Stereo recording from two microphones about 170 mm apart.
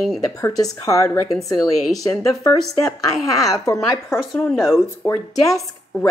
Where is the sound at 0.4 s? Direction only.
20° left (ahead or behind).